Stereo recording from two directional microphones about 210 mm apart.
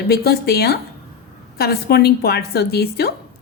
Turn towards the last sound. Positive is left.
turn(degrees=50)  # may be behind; listen again after turning